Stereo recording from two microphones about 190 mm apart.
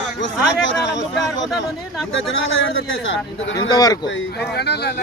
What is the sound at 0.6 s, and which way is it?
Speech, 70° left (ahead or behind).